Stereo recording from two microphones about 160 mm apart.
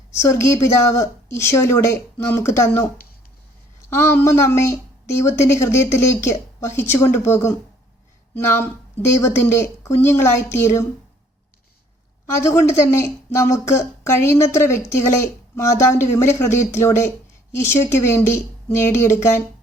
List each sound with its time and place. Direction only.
0.1 s speech: 15° left (ahead or behind)
3.8 s speech: 15° left (ahead or behind)
12.2 s speech: 20° left (ahead or behind)